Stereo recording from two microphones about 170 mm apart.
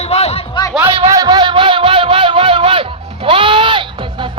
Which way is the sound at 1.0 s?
20° right (ahead or behind).